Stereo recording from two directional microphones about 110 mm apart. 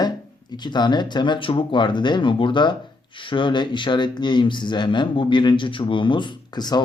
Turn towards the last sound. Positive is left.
turn(degrees=40)  # may be behind; listen again after turning